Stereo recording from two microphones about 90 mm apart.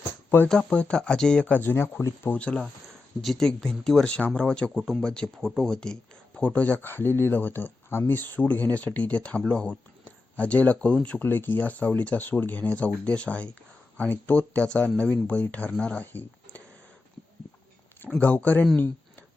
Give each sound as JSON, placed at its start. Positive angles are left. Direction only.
{"t": 0.4, "sound": "speech", "side_deg": 10}
{"t": 2.3, "sound": "speech", "side_deg": 10}
{"t": 4.8, "sound": "speech", "side_deg": 0}
{"t": 18.2, "sound": "speech", "side_deg": 15}